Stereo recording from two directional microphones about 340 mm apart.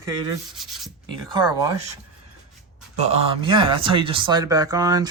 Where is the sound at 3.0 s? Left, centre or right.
Centre.